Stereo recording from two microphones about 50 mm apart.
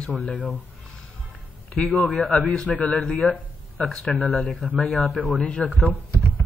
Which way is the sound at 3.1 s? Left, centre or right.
Left.